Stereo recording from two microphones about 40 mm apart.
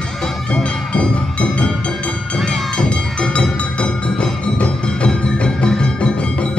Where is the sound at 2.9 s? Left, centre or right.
Left.